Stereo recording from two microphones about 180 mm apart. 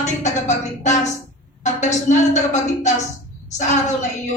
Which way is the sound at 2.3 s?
40° left (ahead or behind).